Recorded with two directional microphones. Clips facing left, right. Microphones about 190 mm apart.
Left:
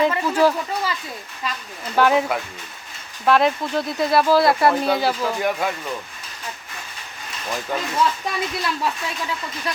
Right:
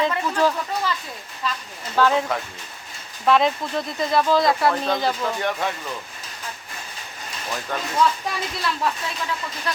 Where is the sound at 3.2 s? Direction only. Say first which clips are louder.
Left 1 dB; centre (ahead or behind).